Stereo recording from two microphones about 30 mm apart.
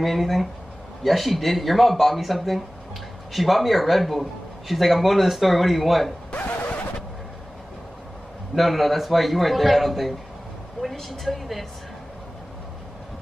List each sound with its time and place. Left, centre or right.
0.0 s a man's voice: centre
6.3 s vehicle: left
8.5 s a man's voice: centre